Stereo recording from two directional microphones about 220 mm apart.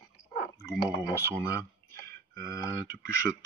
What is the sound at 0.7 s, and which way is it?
Speech, 15° left (ahead or behind).